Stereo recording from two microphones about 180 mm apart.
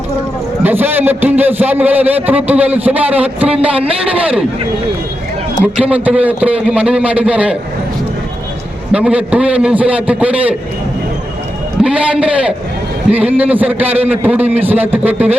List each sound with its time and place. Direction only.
0.6 s a man's voice: 10° right (ahead or behind)
3.8 s a man's voice: 30° right (ahead or behind)
4.1 s a man's voice: 5° right (ahead or behind)
5.7 s a man's voice: 5° right (ahead or behind)
8.9 s a man's voice: 5° right (ahead or behind)
11.8 s a man's voice: 5° right (ahead or behind)